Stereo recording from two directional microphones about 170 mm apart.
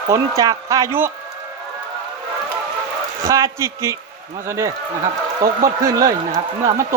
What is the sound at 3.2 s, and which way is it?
Speech, 20° right (ahead or behind).